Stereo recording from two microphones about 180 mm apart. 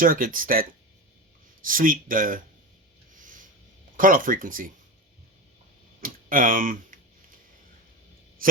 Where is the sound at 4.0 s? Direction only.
50° right (ahead or behind).